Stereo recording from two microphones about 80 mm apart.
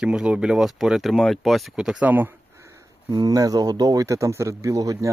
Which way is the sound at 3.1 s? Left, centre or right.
Right.